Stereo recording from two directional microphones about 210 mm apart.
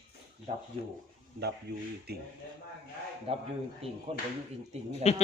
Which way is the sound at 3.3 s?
25° right (ahead or behind).